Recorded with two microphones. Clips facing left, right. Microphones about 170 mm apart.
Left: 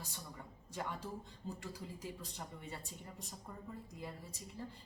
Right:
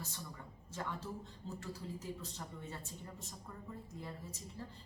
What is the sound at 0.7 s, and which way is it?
A man's voice, 15° left (ahead or behind).